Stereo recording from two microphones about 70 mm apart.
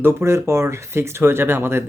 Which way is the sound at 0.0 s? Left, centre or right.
Right.